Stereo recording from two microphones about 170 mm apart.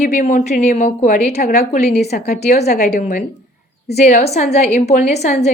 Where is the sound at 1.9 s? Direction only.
70° left (ahead or behind).